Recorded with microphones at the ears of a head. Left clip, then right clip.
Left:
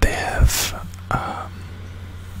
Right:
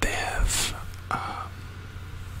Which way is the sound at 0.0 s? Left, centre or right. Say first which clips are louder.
Left 5 dB; left.